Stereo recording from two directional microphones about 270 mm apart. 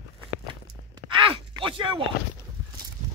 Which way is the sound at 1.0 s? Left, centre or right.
Centre.